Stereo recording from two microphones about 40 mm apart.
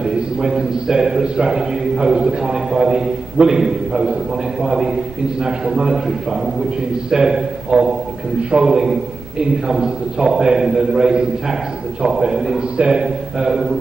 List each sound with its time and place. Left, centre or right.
0.0 s a man's voice: centre
7.1 s a man's voice: centre
8.7 s a man's voice: centre